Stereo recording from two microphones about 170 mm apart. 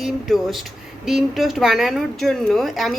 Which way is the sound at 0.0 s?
Centre (ahead or behind).